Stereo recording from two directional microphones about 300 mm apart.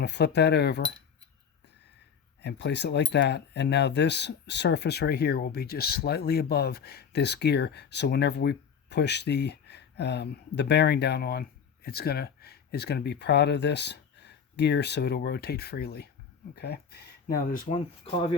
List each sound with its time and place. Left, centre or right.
0.0 s speech: left
2.4 s speech: left